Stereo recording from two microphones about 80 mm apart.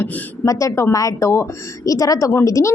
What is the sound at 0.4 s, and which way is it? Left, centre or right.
A woman's voice, left.